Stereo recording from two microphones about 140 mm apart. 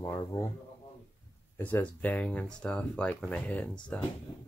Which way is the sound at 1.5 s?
15° left (ahead or behind).